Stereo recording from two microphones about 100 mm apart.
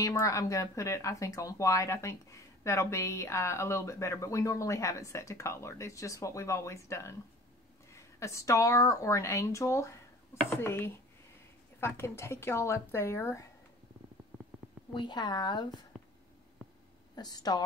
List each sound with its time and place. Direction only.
0.0 s a woman's voice: 35° left (ahead or behind)
15.0 s a woman's voice: 50° left (ahead or behind)
15.9 s a sound: 5° left (ahead or behind)
17.1 s a woman's voice: 40° left (ahead or behind)